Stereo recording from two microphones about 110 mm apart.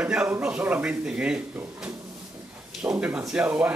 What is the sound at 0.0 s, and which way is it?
Speech, 10° right (ahead or behind).